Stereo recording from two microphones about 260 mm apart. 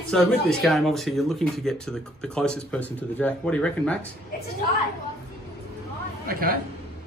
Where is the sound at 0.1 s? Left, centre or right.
Centre.